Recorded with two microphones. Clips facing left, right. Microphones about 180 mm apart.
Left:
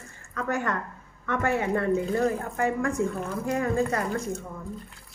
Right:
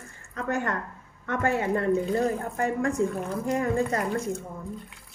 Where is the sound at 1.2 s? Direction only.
40° right (ahead or behind).